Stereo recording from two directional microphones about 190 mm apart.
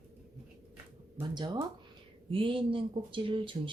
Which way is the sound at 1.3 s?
20° right (ahead or behind).